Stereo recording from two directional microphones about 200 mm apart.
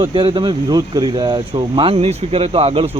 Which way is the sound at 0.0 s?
25° right (ahead or behind).